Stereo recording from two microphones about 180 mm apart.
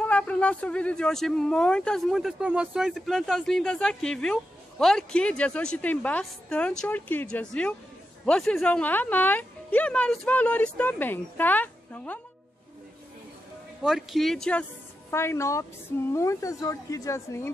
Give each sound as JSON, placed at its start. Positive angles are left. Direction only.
{"t": 0.0, "sound": "speech", "side_deg": 5}
{"t": 13.8, "sound": "a woman's voice", "side_deg": 0}